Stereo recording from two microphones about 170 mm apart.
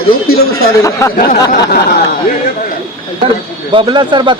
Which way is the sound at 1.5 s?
60° left (ahead or behind).